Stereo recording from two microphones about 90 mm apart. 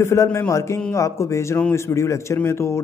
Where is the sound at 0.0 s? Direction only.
30° left (ahead or behind).